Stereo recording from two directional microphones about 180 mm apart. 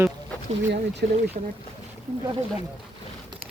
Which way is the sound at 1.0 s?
60° right (ahead or behind).